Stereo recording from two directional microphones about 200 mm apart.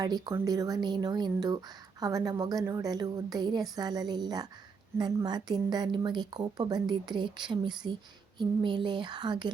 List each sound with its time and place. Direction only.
0.0 s speech: 20° right (ahead or behind)